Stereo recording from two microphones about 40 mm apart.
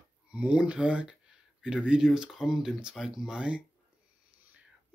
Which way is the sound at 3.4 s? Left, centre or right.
Right.